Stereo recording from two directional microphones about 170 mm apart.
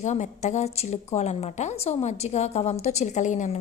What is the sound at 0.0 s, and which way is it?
A woman's voice, 45° left (ahead or behind).